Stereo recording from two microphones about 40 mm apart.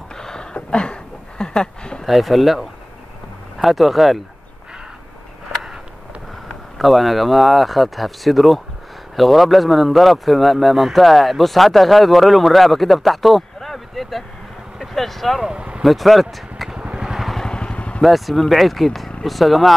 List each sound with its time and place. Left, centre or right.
0.1 s a sound: centre
2.0 s speech: centre
6.8 s speech: centre
15.4 s speech: right
15.8 s speech: centre
17.5 s vehicle: left
18.0 s speech: centre